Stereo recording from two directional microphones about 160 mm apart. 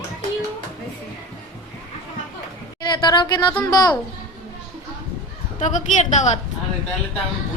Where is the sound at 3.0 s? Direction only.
30° left (ahead or behind).